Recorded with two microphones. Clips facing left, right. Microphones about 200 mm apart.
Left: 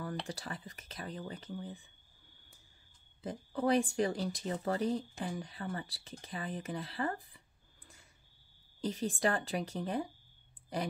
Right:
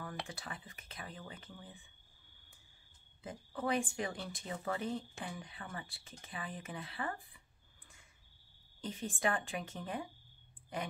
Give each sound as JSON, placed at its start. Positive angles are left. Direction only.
{"t": 0.3, "sound": "speech", "side_deg": 35}
{"t": 3.2, "sound": "speech", "side_deg": 35}
{"t": 8.8, "sound": "speech", "side_deg": 35}